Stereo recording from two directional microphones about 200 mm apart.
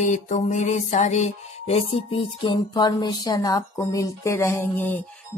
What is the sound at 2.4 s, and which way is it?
Speech, 25° left (ahead or behind).